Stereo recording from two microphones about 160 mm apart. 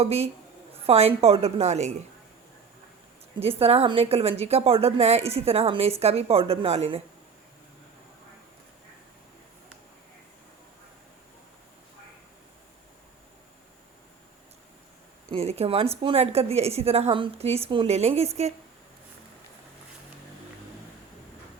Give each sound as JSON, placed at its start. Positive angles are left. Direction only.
{"t": 0.0, "sound": "a woman's voice", "side_deg": -40}
{"t": 3.6, "sound": "a woman's voice", "side_deg": -40}
{"t": 15.3, "sound": "a woman's voice", "side_deg": -40}